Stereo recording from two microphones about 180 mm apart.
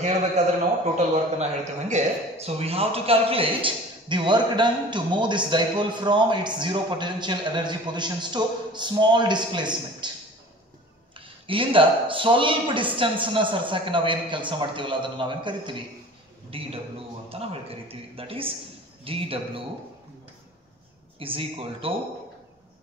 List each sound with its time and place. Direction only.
0.4 s a man's voice: 40° right (ahead or behind)
11.1 s a man's voice: 30° right (ahead or behind)
21.2 s speech: 30° right (ahead or behind)